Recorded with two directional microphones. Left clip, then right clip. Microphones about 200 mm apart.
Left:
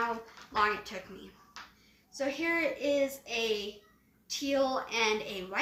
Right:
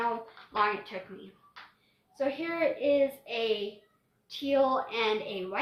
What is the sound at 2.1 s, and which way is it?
A child's voice, 10° left (ahead or behind).